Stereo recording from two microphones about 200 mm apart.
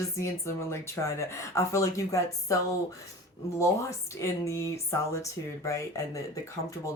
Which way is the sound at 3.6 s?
15° left (ahead or behind).